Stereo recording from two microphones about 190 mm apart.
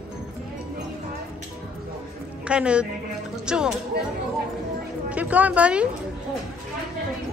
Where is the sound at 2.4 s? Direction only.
5° right (ahead or behind).